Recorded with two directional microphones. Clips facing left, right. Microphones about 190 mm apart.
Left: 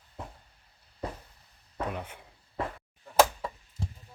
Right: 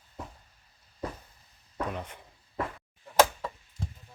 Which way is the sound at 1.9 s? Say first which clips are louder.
Even; 5° left (ahead or behind).